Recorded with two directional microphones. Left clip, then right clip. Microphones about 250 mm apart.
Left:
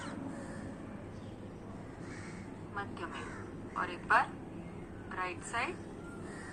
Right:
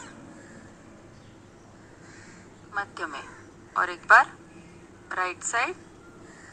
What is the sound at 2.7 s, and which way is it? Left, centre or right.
A woman's voice, right.